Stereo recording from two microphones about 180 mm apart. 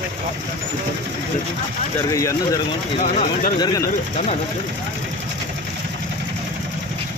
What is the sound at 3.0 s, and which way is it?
Speech, 45° left (ahead or behind).